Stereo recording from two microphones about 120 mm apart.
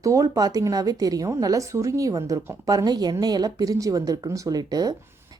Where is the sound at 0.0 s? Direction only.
30° right (ahead or behind).